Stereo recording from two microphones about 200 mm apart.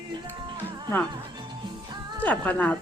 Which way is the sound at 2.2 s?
10° left (ahead or behind).